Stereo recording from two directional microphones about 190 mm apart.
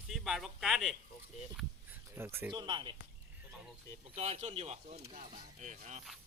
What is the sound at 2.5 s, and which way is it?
Speech, 25° right (ahead or behind).